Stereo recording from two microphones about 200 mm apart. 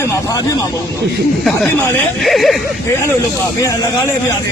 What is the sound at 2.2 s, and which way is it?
Speech, centre (ahead or behind).